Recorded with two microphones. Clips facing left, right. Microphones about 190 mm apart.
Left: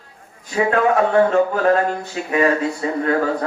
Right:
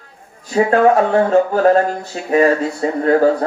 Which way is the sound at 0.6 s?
35° right (ahead or behind).